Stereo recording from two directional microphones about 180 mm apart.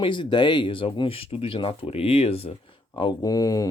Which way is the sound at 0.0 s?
25° left (ahead or behind).